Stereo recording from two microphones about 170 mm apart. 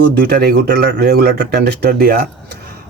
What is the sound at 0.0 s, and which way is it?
Speech, 70° right (ahead or behind).